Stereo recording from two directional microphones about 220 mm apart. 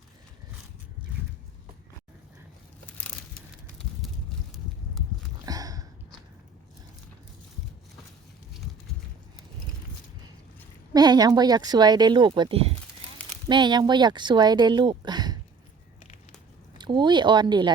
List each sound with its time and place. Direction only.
5.5 s a sound: 15° right (ahead or behind)
10.9 s speech: 20° right (ahead or behind)
16.7 s speech: 20° right (ahead or behind)